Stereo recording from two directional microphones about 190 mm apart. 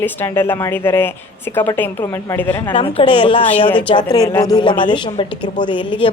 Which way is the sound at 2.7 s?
30° left (ahead or behind).